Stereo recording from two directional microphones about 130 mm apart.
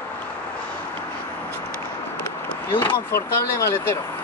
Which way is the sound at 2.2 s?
20° left (ahead or behind).